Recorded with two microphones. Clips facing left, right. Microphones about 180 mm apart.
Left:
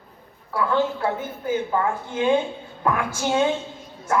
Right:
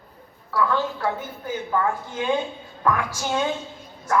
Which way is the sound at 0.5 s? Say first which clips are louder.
Left 1 dB; 25° left (ahead or behind).